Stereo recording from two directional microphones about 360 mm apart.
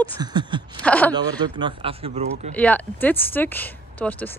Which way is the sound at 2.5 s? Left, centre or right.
Centre.